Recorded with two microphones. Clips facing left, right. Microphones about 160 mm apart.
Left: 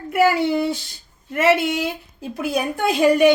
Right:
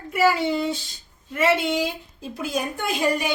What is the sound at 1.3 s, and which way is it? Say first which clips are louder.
A woman's voice: left 3 dB; 65° left (ahead or behind).